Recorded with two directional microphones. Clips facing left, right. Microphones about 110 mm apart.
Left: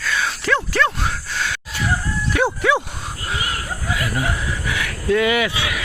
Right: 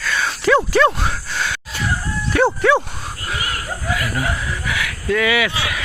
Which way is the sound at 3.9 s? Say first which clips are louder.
Right 1 dB; 20° left (ahead or behind).